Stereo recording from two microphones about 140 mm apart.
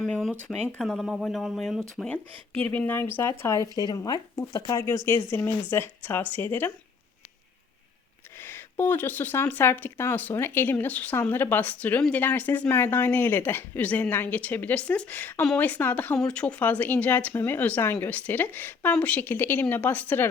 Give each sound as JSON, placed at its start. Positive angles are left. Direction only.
{"t": 0.0, "sound": "speech", "side_deg": 0}
{"t": 2.0, "sound": "speech", "side_deg": 10}
{"t": 8.4, "sound": "speech", "side_deg": 15}